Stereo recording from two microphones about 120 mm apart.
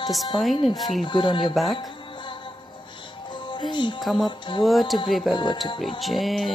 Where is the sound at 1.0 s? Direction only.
40° left (ahead or behind).